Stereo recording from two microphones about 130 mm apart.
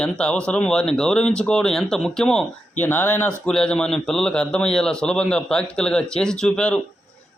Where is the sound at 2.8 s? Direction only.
15° left (ahead or behind).